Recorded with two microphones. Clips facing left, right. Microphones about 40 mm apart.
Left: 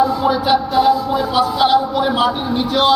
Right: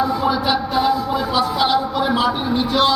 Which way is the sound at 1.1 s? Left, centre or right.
Left.